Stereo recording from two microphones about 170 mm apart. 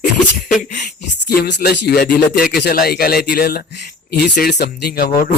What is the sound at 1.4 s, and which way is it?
Speech, 80° left.